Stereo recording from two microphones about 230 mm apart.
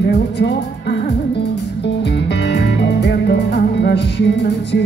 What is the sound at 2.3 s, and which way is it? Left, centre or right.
Music, left.